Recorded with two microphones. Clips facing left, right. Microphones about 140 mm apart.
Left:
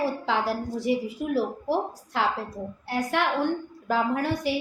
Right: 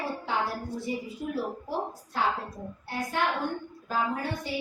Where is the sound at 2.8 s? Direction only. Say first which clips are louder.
Left 3 dB; 80° left.